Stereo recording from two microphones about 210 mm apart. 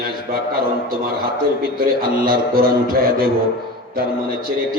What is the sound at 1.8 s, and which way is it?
A man's voice, 45° right (ahead or behind).